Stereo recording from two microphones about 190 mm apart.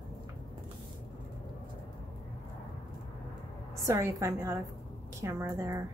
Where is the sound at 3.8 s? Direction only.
15° right (ahead or behind).